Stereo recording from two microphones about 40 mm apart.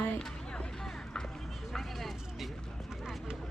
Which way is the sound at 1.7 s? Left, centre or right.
Centre.